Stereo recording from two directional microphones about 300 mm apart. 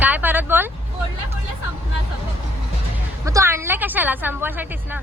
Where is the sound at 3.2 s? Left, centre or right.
Centre.